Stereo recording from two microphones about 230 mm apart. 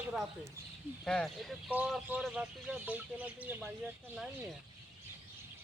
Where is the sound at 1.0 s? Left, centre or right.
Centre.